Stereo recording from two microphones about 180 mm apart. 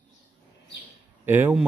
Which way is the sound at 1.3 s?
10° right (ahead or behind).